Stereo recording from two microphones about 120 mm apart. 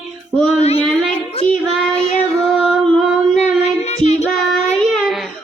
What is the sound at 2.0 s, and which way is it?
Child singing, 60° left (ahead or behind).